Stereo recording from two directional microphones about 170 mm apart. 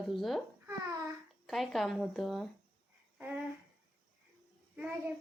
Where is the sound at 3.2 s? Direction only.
10° right (ahead or behind).